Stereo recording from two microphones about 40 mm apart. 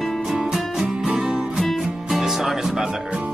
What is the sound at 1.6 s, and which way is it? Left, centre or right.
Music, centre.